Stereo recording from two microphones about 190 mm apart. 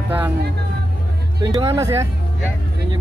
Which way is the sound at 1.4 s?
20° right (ahead or behind).